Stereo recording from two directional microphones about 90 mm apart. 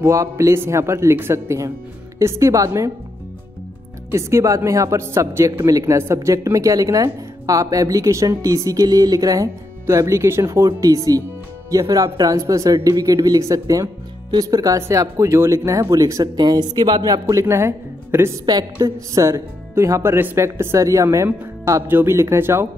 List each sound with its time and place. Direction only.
0.0 s speech: 35° right (ahead or behind)
4.1 s speech: 35° right (ahead or behind)
16.3 s speech: 50° right (ahead or behind); by 18.4 s 30° right (ahead or behind)
18.4 s a woman's voice: 50° right (ahead or behind)
19.1 s speech: 35° right (ahead or behind)